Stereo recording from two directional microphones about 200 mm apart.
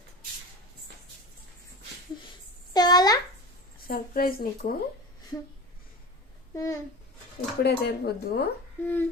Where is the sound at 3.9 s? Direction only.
45° left (ahead or behind).